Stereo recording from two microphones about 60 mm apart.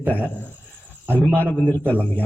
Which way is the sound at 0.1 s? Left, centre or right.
Left.